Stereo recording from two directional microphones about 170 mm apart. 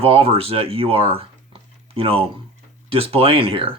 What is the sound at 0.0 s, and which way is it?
Speech, 35° right (ahead or behind).